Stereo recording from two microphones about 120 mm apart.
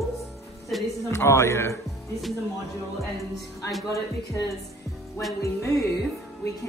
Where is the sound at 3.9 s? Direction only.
25° left (ahead or behind).